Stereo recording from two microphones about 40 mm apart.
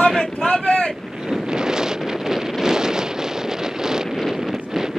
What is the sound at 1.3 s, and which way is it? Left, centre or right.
Wind noise, centre.